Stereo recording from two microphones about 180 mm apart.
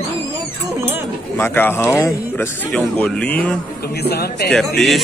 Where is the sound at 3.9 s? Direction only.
65° left (ahead or behind).